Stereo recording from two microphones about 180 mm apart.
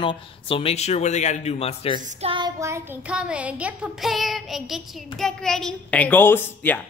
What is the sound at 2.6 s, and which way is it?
Child singing, 15° right (ahead or behind).